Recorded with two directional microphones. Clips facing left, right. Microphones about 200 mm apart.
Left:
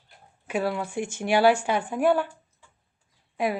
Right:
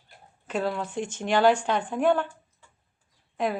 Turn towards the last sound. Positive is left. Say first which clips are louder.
# left 1 dB
turn(degrees=10)  # may be behind; listen again after turning